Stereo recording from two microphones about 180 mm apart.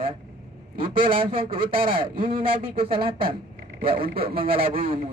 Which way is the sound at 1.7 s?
55° right (ahead or behind).